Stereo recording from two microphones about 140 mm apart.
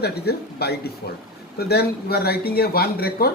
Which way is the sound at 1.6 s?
90° left.